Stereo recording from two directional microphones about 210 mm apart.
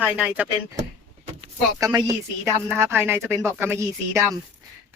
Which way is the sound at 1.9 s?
15° right (ahead or behind).